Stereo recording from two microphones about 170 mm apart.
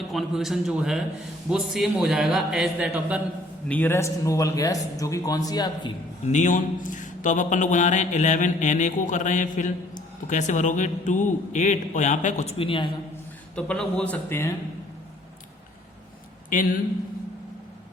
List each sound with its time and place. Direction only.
0.1 s a man's voice: centre (ahead or behind)
3.7 s a man's voice: 10° left (ahead or behind)
6.2 s a man's voice: 45° left (ahead or behind)
13.6 s a man's voice: 5° left (ahead or behind)